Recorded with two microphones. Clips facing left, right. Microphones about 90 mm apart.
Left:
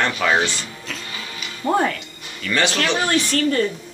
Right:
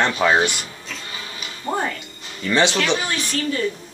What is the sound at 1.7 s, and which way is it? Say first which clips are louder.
Speech: left 5 dB; 90° left.